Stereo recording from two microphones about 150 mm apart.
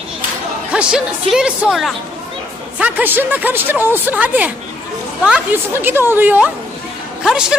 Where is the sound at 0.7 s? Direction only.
5° right (ahead or behind).